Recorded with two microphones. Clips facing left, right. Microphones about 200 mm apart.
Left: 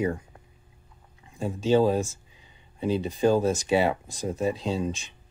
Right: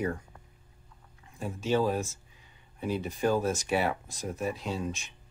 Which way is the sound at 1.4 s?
30° left (ahead or behind).